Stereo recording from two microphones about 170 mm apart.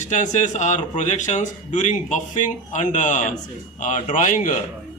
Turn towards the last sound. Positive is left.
turn(degrees=50)  # may be behind; listen again after turning